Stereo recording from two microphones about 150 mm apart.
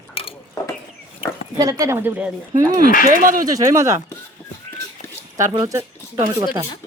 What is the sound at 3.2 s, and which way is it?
Speech, 65° right (ahead or behind).